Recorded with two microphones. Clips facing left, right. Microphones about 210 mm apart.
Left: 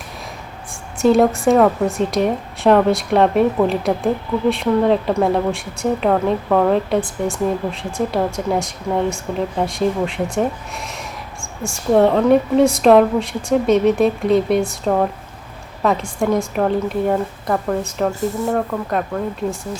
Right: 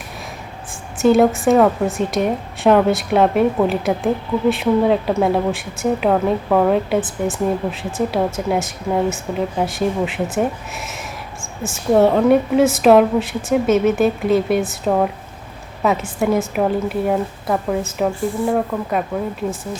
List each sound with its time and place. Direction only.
0.7 s speech: centre (ahead or behind)
18.1 s speech: 40° left (ahead or behind)
18.3 s speech: 10° right (ahead or behind)